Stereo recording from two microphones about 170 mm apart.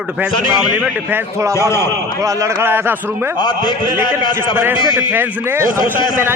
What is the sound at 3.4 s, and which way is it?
A man's voice, 25° left (ahead or behind).